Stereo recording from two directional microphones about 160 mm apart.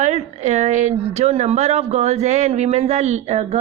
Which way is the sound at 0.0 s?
45° right (ahead or behind).